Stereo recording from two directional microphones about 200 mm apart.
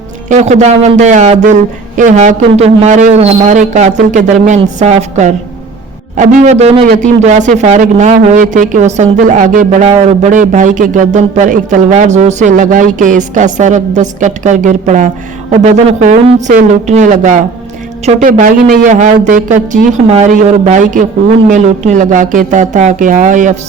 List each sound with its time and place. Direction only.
0.3 s a man's voice: 35° right (ahead or behind)